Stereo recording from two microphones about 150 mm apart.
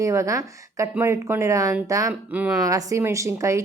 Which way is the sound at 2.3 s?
10° right (ahead or behind).